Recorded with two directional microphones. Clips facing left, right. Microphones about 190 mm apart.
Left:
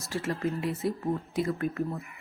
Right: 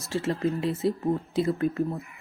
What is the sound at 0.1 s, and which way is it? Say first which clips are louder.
Speech: right 4 dB; 25° right (ahead or behind).